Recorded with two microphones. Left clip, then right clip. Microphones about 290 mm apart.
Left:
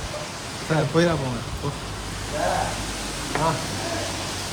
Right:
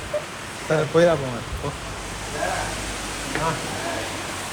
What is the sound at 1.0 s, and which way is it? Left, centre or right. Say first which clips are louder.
Speech: right 5 dB; centre.